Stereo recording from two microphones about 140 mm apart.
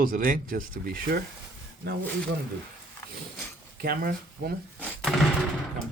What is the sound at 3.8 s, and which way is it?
Speech, 90° right.